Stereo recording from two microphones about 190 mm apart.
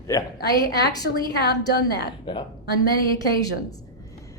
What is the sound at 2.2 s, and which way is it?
Speech, 20° left (ahead or behind).